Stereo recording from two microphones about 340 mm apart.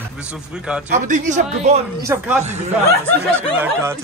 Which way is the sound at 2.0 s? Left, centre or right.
Centre.